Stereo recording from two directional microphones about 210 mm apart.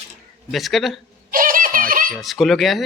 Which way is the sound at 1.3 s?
40° right (ahead or behind).